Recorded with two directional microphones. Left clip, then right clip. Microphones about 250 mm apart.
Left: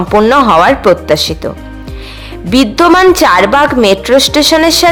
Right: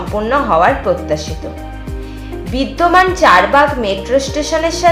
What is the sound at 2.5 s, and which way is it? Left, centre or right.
A woman's voice, left.